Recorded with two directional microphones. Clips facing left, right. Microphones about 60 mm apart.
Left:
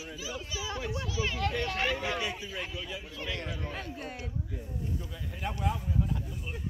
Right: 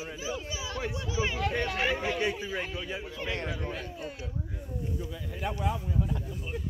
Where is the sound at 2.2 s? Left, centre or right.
Right.